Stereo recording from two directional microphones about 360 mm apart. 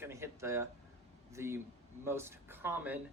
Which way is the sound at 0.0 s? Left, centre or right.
Centre.